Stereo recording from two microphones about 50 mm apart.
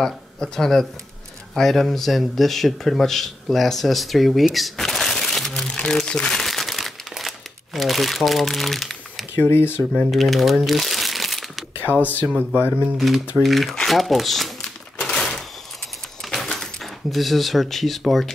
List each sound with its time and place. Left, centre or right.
0.0 s speech: centre
6.4 s crumpling: centre
9.4 s speech: left
10.1 s speech: centre
10.7 s crumpling: centre
11.8 s speech: left
12.9 s speech: centre
15.0 s a sound: centre
16.2 s drawer open or close: centre